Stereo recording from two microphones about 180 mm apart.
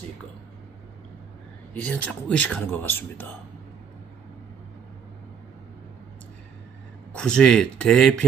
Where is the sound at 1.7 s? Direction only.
10° left (ahead or behind).